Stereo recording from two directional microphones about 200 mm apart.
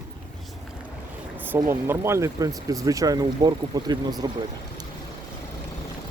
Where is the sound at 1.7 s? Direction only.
15° right (ahead or behind).